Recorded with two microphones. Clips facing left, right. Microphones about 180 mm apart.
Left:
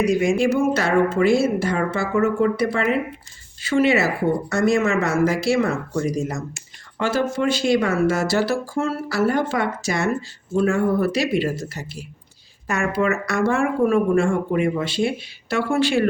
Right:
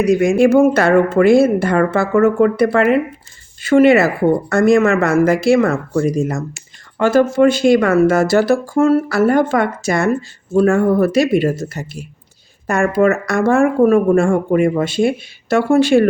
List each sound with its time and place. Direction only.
0.2 s speech: 50° right (ahead or behind)